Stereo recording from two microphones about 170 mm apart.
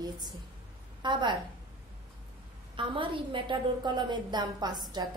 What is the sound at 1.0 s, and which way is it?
Speech, 25° right (ahead or behind).